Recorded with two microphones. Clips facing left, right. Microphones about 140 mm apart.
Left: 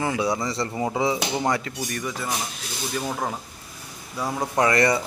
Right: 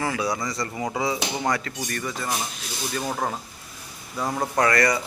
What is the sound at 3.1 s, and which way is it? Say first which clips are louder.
Speech: right 1 dB; centre (ahead or behind).